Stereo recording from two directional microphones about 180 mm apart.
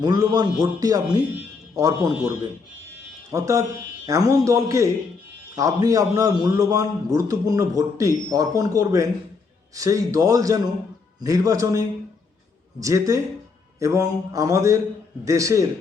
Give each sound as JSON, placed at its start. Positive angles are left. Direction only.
{"t": 0.0, "sound": "a man's voice", "side_deg": -20}